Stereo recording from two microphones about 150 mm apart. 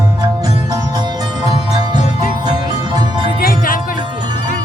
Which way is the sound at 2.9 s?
30° right (ahead or behind).